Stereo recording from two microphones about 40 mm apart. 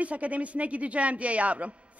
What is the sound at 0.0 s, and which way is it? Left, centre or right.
A man's voice, right.